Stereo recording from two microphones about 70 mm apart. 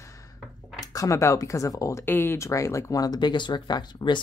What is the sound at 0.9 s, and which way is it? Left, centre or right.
Speech, left.